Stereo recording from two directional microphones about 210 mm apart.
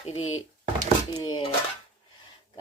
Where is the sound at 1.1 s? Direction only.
20° left (ahead or behind).